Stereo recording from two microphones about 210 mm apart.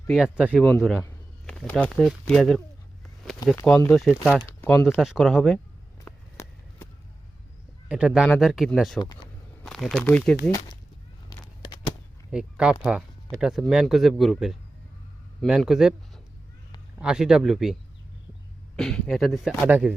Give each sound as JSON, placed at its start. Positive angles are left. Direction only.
{"t": 0.1, "sound": "speech", "side_deg": -5}
{"t": 4.6, "sound": "speech", "side_deg": 10}
{"t": 6.1, "sound": "run", "side_deg": 10}
{"t": 7.9, "sound": "speech", "side_deg": -5}
{"t": 9.0, "sound": "speech", "side_deg": 20}
{"t": 9.6, "sound": "speech", "side_deg": 5}
{"t": 12.3, "sound": "speech", "side_deg": -5}
{"t": 18.8, "sound": "speech", "side_deg": 5}